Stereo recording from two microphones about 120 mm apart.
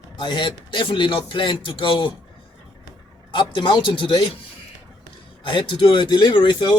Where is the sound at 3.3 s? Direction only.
40° left (ahead or behind).